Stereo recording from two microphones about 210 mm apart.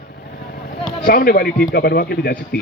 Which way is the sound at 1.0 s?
45° left (ahead or behind).